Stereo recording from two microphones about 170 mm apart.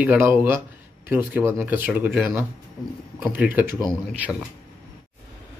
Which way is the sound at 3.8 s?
5° left (ahead or behind).